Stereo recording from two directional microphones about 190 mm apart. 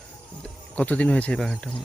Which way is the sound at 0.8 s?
5° left (ahead or behind).